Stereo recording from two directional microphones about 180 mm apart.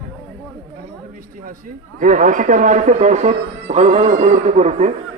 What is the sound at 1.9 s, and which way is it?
A man's voice, 50° right (ahead or behind).